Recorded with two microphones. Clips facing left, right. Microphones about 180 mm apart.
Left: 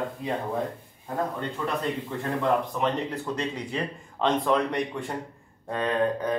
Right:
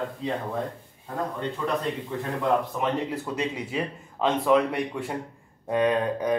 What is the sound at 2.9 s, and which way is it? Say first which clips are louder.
Speech: right 1 dB; 5° right (ahead or behind).